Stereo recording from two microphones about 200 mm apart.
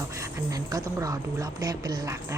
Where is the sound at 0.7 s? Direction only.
15° right (ahead or behind).